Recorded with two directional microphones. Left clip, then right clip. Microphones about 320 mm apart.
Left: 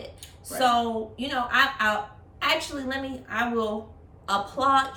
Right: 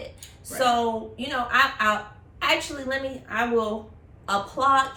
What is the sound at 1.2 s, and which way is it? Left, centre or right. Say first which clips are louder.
Speech: right 1 dB; centre.